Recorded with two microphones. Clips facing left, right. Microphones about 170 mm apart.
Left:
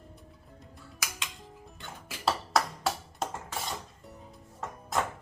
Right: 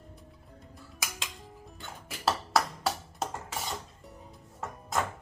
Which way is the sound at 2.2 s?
Centre (ahead or behind).